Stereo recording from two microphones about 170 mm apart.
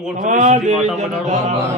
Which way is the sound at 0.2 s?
50° right (ahead or behind).